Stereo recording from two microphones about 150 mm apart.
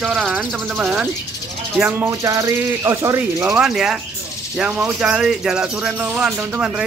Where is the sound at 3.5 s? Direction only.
5° right (ahead or behind).